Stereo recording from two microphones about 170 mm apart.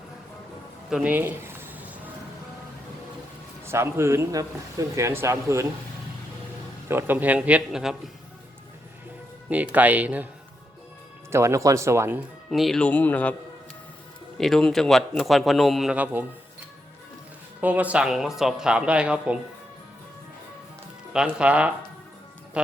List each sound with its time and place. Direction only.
0.9 s a sound: 5° right (ahead or behind)
3.7 s a man's voice: 15° right (ahead or behind)
6.8 s a man's voice: 10° right (ahead or behind)
9.5 s a man's voice: 10° right (ahead or behind)
11.3 s a man's voice: 15° right (ahead or behind)
12.5 s speech: centre (ahead or behind)
14.3 s a man's voice: centre (ahead or behind)
17.6 s a man's voice: 10° right (ahead or behind)
21.1 s a man's voice: 5° right (ahead or behind)